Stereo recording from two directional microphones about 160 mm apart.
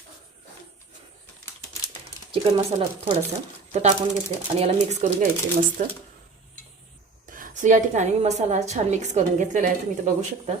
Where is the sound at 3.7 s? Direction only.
45° right (ahead or behind).